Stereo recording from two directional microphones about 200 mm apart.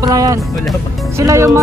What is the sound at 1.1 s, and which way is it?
Speech, 15° right (ahead or behind).